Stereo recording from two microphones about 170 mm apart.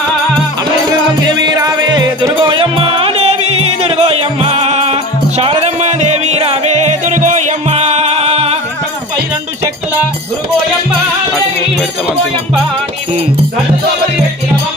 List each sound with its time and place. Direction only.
1.4 s music: 25° right (ahead or behind)